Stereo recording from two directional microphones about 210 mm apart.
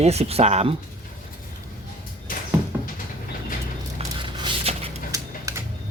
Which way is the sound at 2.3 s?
40° left (ahead or behind).